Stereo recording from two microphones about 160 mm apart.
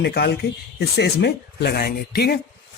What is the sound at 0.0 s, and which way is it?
A man's voice, 90° left.